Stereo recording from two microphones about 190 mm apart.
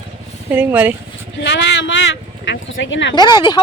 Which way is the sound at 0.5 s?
10° right (ahead or behind).